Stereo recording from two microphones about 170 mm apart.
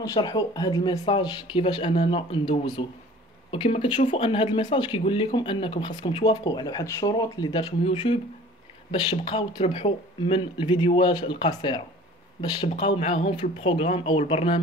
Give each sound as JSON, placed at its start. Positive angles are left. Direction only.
{"t": 0.0, "sound": "speech", "side_deg": 20}